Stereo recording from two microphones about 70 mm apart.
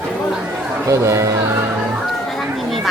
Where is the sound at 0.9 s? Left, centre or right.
Right.